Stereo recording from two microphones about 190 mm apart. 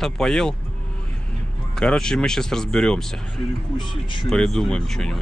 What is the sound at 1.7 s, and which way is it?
Speech, 5° left (ahead or behind).